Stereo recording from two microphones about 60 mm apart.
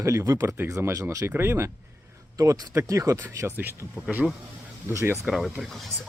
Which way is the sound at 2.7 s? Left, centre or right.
Right.